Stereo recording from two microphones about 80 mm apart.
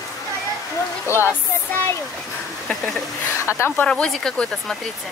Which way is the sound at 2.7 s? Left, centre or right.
Centre.